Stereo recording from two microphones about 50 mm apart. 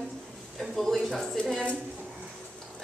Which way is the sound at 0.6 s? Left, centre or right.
Centre.